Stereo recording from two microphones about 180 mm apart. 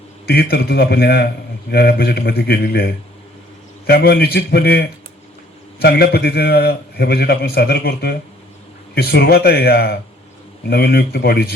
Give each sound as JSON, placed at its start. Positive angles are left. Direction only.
{"t": 0.3, "sound": "a man's voice", "side_deg": 60}